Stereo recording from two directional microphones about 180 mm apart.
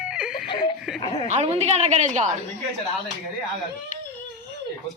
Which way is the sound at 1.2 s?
40° right (ahead or behind).